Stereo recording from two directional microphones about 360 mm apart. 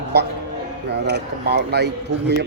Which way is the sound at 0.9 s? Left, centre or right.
Right.